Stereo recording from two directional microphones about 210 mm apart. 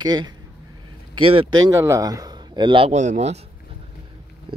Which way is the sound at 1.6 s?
15° right (ahead or behind).